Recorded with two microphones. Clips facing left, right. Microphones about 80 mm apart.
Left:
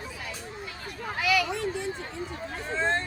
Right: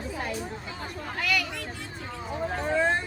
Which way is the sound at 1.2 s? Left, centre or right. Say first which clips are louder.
Left 4 dB; centre.